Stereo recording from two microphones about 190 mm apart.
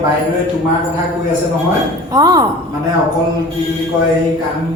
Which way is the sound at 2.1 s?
20° right (ahead or behind).